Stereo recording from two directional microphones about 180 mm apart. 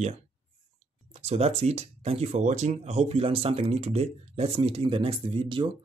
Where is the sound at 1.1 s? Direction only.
35° right (ahead or behind).